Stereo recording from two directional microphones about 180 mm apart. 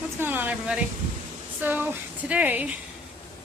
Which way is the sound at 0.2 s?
10° right (ahead or behind).